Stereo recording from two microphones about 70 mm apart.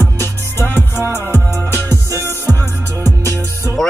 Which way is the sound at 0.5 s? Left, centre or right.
Left.